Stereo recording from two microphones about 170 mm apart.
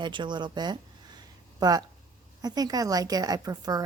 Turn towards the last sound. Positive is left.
turn(degrees=-20)  # may be behind; listen again after turning